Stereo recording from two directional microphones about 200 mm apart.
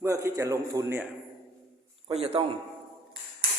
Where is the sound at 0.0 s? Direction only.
15° right (ahead or behind).